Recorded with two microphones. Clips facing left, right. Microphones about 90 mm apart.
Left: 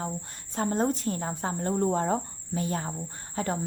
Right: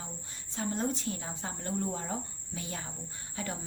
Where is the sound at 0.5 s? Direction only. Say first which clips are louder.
Left 7 dB; 45° left (ahead or behind).